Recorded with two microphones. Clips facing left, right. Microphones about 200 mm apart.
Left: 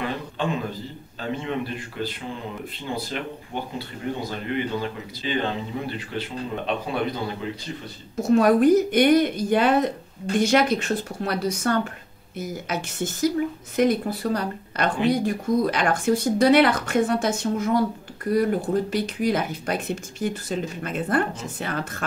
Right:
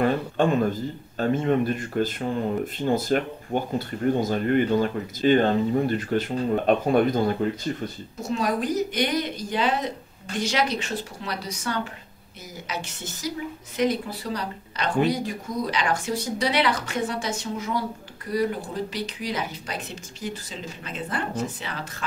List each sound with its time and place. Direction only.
0.0 s a man's voice: 50° right (ahead or behind)
8.3 s a woman's voice: 55° left (ahead or behind)